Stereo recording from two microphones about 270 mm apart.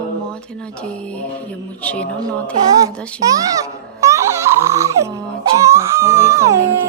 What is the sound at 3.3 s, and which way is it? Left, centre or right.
Music, centre.